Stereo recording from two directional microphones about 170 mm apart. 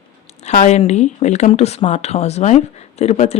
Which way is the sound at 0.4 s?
45° left (ahead or behind).